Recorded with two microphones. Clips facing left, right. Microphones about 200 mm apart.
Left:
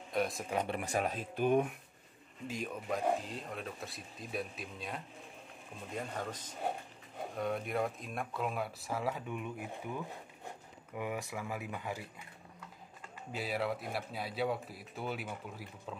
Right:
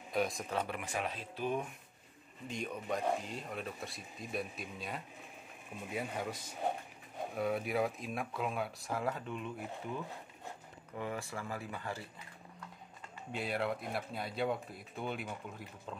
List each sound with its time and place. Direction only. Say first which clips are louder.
0.1 s a man's voice: even; centre (ahead or behind)
0.7 s speech: left 4 dB; 40° left (ahead or behind); by 1.7 s 55° left (ahead or behind)
2.4 s speech: left 1 dB; 5° left (ahead or behind)
9.1 s speech: left 1 dB; 10° left (ahead or behind)
11.0 s speech: left 1 dB; 15° left (ahead or behind)
13.3 s speech: even; 5° left (ahead or behind)